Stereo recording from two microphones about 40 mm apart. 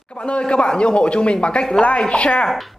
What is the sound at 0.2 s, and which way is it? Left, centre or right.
Speech, left.